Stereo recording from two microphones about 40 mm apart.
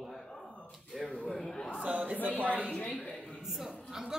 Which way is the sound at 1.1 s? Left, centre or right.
Left.